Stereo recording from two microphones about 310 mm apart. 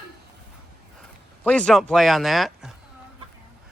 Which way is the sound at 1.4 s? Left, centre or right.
Centre.